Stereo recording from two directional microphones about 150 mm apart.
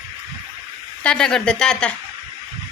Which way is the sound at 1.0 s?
5° left (ahead or behind).